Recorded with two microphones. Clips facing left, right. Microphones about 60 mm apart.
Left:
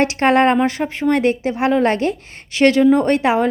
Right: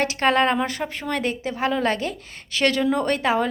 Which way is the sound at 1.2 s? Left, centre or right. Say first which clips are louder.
Left 7 dB; left.